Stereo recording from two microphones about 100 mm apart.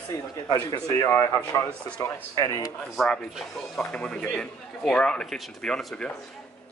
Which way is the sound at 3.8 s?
10° left (ahead or behind).